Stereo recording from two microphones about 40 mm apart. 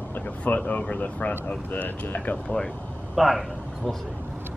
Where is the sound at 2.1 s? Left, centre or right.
Left.